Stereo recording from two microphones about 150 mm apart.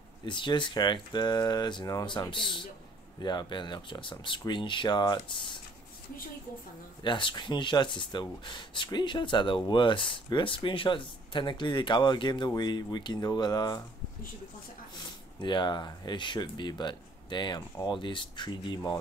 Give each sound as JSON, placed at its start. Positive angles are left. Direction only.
{"t": 0.2, "sound": "speech", "side_deg": 30}
{"t": 7.0, "sound": "speech", "side_deg": 30}
{"t": 15.0, "sound": "speech", "side_deg": 30}